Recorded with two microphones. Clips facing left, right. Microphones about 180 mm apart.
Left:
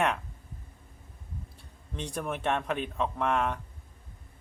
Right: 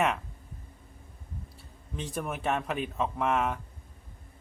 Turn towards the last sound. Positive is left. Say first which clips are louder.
# even
turn(degrees=-5)  # may be behind; listen again after turning